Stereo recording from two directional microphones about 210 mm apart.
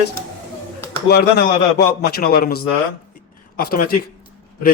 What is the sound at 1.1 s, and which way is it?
A man's voice, 50° left (ahead or behind).